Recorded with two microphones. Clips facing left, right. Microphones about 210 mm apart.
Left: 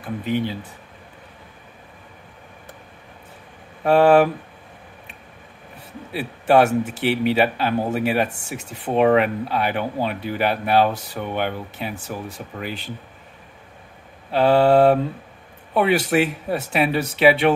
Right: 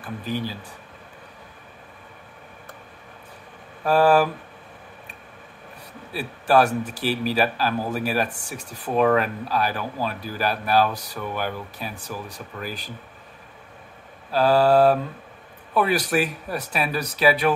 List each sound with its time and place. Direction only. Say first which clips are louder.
0.0 s a man's voice: left 5 dB; 20° left (ahead or behind)
3.8 s a man's voice: left 4 dB; 25° left (ahead or behind)
6.1 s a man's voice: left 3 dB; 25° left (ahead or behind)
14.3 s a man's voice: left 2 dB; 25° left (ahead or behind)